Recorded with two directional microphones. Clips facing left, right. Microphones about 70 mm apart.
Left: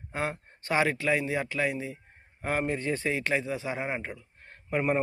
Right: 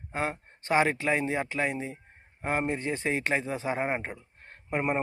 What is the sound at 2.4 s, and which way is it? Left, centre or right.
Speech, centre.